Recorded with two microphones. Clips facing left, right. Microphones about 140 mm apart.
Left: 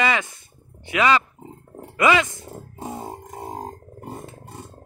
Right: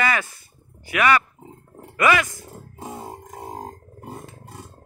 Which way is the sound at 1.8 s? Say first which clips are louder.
Left 1 dB; 20° left (ahead or behind).